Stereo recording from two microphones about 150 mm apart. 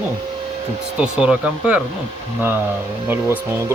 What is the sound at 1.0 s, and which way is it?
Speech, 5° right (ahead or behind).